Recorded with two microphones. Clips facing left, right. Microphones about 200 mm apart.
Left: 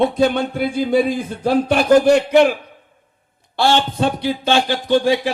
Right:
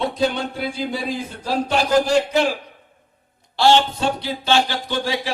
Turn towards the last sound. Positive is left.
turn(degrees=55)  # may be behind; listen again after turning